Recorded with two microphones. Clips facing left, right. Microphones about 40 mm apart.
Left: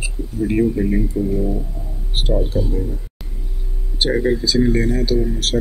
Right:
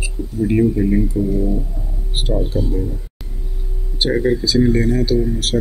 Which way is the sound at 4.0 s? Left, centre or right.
Centre.